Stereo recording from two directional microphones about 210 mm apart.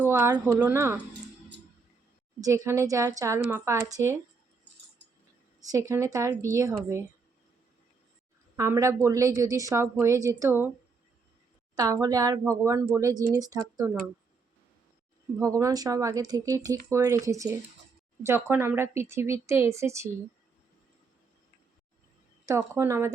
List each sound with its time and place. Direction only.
0.0 s a woman's voice: 10° right (ahead or behind)
2.4 s a woman's voice: 15° right (ahead or behind)
5.9 s a woman's voice: 15° right (ahead or behind)
8.5 s a woman's voice: 15° right (ahead or behind)
11.7 s a woman's voice: 15° right (ahead or behind)
15.4 s a woman's voice: 15° right (ahead or behind)
22.4 s a woman's voice: 15° right (ahead or behind)